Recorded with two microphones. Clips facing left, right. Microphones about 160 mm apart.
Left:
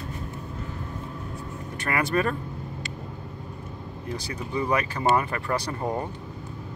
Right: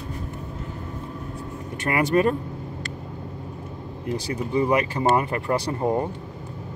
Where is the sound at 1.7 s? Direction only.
20° right (ahead or behind).